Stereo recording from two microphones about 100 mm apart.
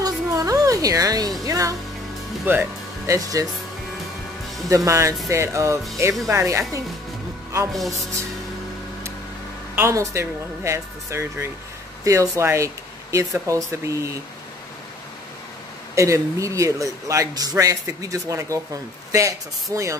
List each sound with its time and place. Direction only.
0.0 s a sound: 35° right (ahead or behind)
1.4 s music: 35° right (ahead or behind)
2.4 s speech: 20° right (ahead or behind)
3.1 s a man's voice: 35° right (ahead or behind)
4.6 s a man's voice: 30° right (ahead or behind)
7.7 s speech: centre (ahead or behind)
9.8 s a man's voice: 25° right (ahead or behind)
15.9 s a man's voice: 30° right (ahead or behind)